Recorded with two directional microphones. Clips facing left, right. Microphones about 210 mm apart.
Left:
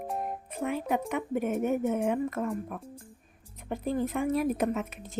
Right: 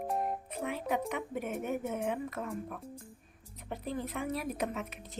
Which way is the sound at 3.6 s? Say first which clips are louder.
Left 7 dB; 50° left (ahead or behind).